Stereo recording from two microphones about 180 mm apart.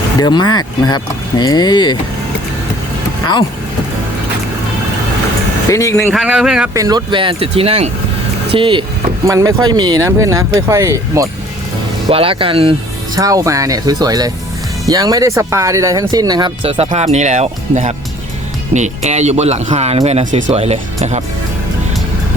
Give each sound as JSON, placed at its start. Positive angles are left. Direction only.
{"t": 0.2, "sound": "speech", "side_deg": 25}
{"t": 5.7, "sound": "speech", "side_deg": 15}
{"t": 6.1, "sound": "speech", "side_deg": -5}
{"t": 6.7, "sound": "speech", "side_deg": -20}
{"t": 9.2, "sound": "speech", "side_deg": -15}
{"t": 12.0, "sound": "speech", "side_deg": -30}
{"t": 13.1, "sound": "speech", "side_deg": -20}
{"t": 16.6, "sound": "speech", "side_deg": -35}